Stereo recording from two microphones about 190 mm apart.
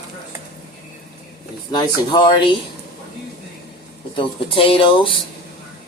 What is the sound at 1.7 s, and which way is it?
Speech, 25° left (ahead or behind).